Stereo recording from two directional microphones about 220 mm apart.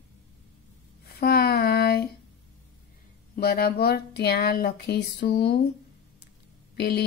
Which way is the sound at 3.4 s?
45° left (ahead or behind).